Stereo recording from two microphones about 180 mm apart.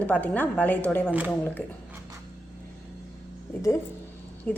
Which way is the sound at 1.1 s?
10° right (ahead or behind).